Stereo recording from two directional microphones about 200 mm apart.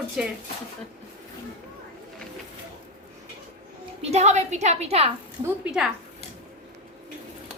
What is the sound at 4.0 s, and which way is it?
A woman's voice, 35° right (ahead or behind).